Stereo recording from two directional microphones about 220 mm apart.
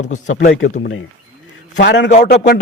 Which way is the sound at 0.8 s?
50° left (ahead or behind).